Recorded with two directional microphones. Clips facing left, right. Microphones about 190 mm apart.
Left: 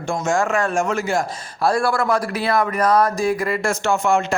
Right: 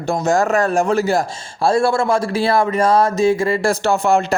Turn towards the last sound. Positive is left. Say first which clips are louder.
# right 3 dB
turn(degrees=-35)  # may be behind; listen again after turning